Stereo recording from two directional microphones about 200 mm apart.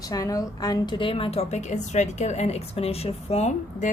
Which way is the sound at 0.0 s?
15° left (ahead or behind).